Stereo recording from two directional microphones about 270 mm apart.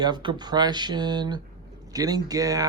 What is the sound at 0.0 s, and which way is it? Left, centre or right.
Speech, centre.